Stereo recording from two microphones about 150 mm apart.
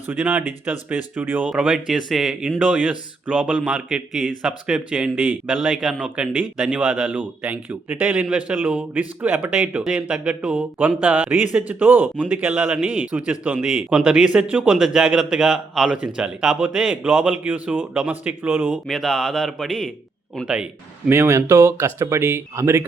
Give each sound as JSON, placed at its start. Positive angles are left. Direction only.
{"t": 0.1, "sound": "a man's voice", "side_deg": -10}
{"t": 18.7, "sound": "a man's voice", "side_deg": 0}
{"t": 21.1, "sound": "a man's voice", "side_deg": -20}